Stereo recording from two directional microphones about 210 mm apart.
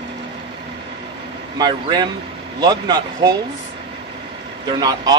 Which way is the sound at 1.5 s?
20° right (ahead or behind).